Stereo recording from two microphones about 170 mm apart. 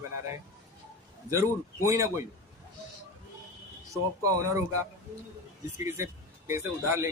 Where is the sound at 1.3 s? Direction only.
15° right (ahead or behind).